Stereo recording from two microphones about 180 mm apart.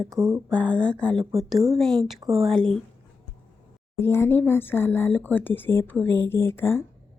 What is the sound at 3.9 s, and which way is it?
Speech, 15° left (ahead or behind).